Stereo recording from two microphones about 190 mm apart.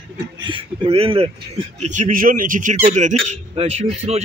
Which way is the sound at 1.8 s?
40° right (ahead or behind).